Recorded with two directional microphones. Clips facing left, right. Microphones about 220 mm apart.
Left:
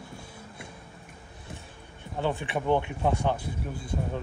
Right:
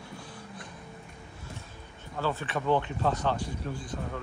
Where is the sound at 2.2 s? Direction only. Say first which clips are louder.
Left 2 dB; 15° left (ahead or behind).